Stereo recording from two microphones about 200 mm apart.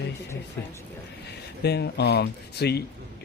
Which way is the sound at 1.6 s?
55° left (ahead or behind).